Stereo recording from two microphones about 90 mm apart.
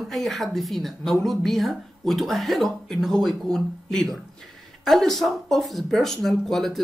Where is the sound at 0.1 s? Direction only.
Centre (ahead or behind).